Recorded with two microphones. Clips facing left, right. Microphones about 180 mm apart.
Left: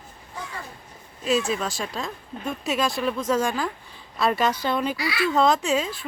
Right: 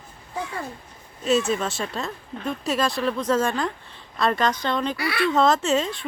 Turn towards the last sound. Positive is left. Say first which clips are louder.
# right 1 dB
turn(degrees=5)  # may be behind; listen again after turning